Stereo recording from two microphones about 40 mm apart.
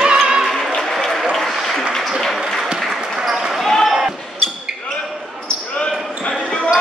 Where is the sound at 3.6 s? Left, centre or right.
Centre.